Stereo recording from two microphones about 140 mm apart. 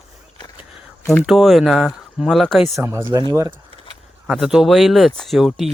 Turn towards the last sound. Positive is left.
turn(degrees=0)  # may be behind; listen again after turning